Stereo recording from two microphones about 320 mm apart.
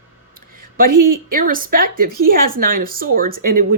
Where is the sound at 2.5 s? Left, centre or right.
Right.